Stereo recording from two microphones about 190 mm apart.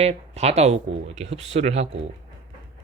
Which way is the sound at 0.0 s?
35° right (ahead or behind).